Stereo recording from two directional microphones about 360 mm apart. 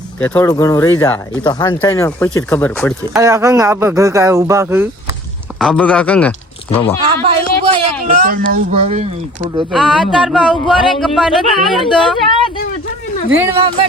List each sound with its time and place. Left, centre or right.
0.2 s speech: centre
3.2 s a man's voice: centre
7.2 s speech: centre
9.4 s speech: centre
13.3 s a man's voice: centre